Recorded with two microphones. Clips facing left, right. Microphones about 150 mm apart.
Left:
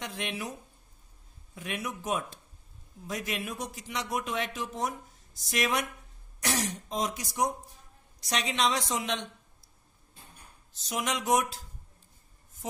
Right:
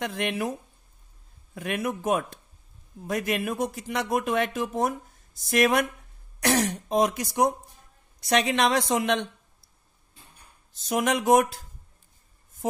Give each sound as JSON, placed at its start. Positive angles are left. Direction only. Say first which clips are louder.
{"t": 0.0, "sound": "speech", "louder": "right 8 dB", "side_deg": -55}
{"t": 10.7, "sound": "speech", "louder": "right 8 dB", "side_deg": -50}